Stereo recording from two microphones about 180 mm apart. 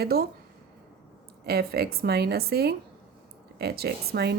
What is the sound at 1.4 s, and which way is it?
A woman's voice, 60° right (ahead or behind).